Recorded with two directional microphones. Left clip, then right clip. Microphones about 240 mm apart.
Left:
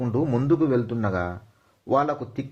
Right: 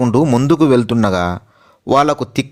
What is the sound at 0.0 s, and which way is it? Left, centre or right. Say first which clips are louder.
Speech: right 11 dB; right.